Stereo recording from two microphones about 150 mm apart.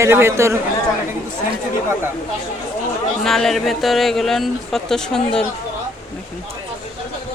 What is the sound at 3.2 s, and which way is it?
Speech, centre (ahead or behind).